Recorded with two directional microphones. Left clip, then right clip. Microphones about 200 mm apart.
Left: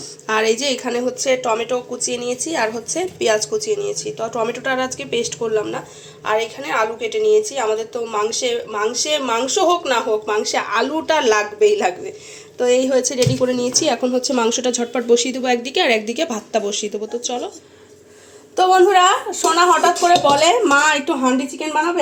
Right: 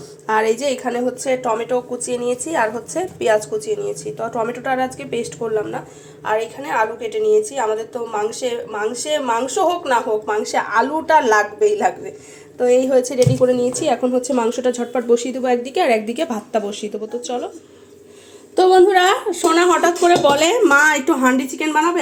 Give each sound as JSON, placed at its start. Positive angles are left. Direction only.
{"t": 0.3, "sound": "a woman's voice", "side_deg": -10}
{"t": 2.5, "sound": "a woman's voice", "side_deg": 5}
{"t": 3.2, "sound": "a woman's voice", "side_deg": -5}
{"t": 18.9, "sound": "speech", "side_deg": -30}